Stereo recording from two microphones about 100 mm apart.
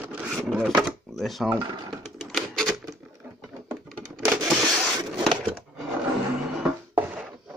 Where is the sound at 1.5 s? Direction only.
45° right (ahead or behind).